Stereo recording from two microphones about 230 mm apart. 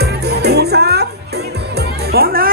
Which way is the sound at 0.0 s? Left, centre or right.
Right.